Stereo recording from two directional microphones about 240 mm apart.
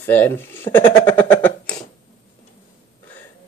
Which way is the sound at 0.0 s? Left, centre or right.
Centre.